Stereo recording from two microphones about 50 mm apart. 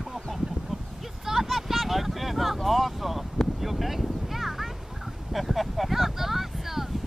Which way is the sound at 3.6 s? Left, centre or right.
Centre.